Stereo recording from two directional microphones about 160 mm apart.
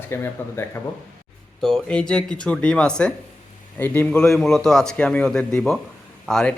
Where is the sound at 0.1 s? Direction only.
15° left (ahead or behind).